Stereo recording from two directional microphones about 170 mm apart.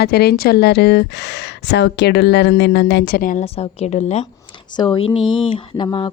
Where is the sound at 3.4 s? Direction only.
35° left (ahead or behind).